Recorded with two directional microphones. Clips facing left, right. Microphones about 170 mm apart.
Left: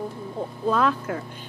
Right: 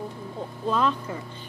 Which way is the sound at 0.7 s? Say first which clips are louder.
Left 2 dB; 5° left (ahead or behind).